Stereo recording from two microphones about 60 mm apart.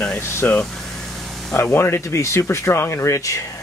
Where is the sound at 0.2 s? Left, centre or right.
Left.